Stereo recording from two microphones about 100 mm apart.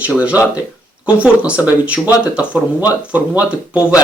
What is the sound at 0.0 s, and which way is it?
Speech, 15° right (ahead or behind).